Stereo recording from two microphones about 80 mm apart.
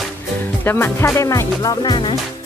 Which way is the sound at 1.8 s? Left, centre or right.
Left.